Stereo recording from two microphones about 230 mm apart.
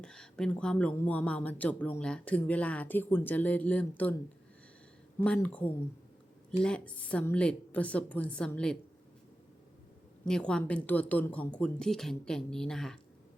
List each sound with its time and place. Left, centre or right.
0.0 s speech: centre
5.2 s speech: centre
10.2 s speech: centre